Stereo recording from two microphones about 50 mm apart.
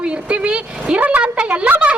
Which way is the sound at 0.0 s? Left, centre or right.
Right.